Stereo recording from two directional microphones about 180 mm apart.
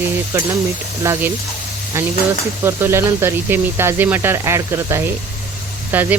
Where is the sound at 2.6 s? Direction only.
15° right (ahead or behind).